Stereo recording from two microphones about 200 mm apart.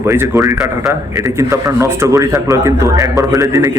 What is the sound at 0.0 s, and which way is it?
Speech, 15° right (ahead or behind).